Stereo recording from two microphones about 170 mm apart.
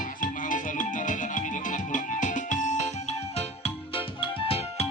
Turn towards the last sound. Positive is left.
turn(degrees=35)  # may be behind; listen again after turning